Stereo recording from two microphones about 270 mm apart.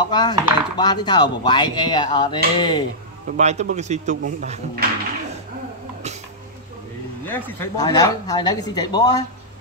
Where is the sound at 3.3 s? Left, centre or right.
Right.